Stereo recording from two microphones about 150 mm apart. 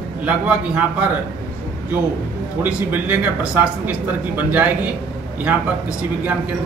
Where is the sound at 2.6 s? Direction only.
10° right (ahead or behind).